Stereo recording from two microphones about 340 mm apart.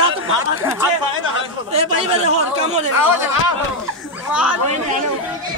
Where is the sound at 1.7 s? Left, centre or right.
Centre.